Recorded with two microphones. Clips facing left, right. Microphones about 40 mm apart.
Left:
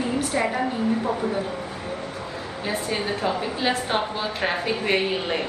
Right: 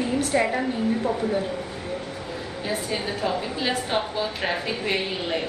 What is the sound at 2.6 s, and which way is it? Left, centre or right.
A woman's voice, centre.